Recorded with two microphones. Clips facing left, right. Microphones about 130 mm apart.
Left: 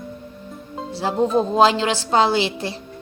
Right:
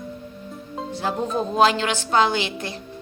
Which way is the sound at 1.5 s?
25° left (ahead or behind).